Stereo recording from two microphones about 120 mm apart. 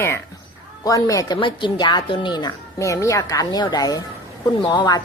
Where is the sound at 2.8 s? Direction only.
25° left (ahead or behind).